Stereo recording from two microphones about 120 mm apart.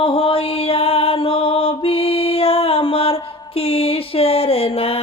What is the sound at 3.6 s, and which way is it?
Music, 55° left (ahead or behind).